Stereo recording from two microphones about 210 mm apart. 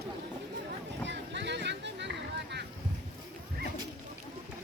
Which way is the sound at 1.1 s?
55° right (ahead or behind).